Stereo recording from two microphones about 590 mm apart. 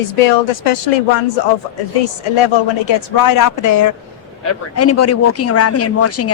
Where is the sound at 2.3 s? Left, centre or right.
Left.